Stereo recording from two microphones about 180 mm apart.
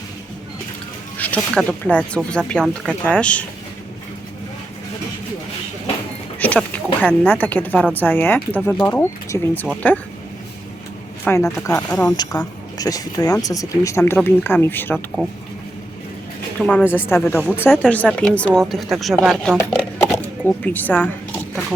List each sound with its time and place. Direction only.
1.2 s speech: 5° left (ahead or behind)
6.4 s speech: 10° left (ahead or behind)
11.3 s speech: 15° left (ahead or behind)
14.9 s speech: centre (ahead or behind)
16.6 s speech: 5° left (ahead or behind)
20.2 s a sound: 10° left (ahead or behind)